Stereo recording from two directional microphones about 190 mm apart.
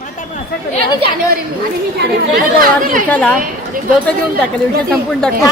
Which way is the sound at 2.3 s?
50° right (ahead or behind).